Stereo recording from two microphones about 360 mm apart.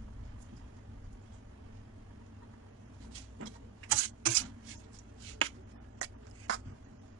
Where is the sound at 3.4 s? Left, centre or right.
Right.